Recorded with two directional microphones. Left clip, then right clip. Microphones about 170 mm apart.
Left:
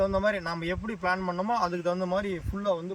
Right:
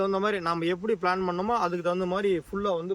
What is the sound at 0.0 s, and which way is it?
A man's voice, 30° right (ahead or behind).